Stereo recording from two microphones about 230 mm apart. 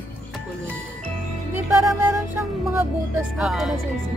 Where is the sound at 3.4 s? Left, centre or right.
Centre.